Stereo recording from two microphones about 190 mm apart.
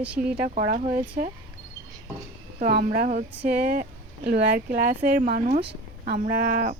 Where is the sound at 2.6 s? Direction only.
50° right (ahead or behind).